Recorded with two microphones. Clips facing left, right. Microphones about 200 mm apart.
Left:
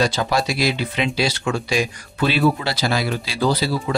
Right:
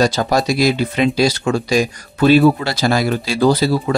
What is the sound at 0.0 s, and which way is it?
Speech, 40° right (ahead or behind).